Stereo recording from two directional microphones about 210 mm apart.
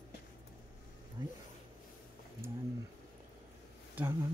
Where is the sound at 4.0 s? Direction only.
10° right (ahead or behind).